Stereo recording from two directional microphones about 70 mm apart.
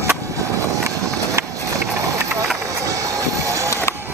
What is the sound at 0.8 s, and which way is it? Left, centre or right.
Run, right.